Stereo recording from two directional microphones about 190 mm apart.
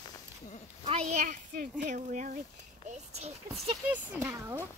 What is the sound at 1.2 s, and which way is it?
Speech, 45° right (ahead or behind).